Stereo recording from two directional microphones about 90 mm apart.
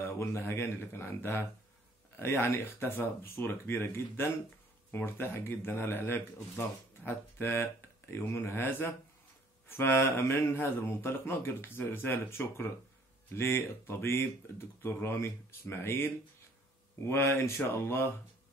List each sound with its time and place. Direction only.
0.0 s speech: 25° left (ahead or behind)